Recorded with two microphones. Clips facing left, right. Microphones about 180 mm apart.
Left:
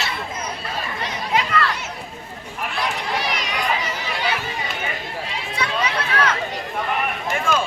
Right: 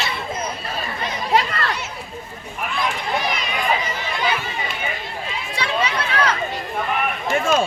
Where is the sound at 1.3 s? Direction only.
35° right (ahead or behind).